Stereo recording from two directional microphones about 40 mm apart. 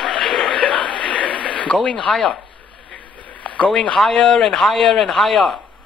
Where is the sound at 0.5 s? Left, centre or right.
Left.